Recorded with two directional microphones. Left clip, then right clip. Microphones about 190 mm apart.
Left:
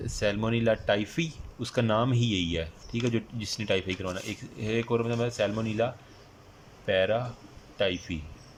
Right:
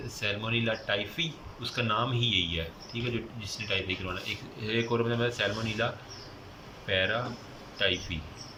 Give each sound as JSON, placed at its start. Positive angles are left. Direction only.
{"t": 0.2, "sound": "speech", "side_deg": 40}
{"t": 4.6, "sound": "speech", "side_deg": 30}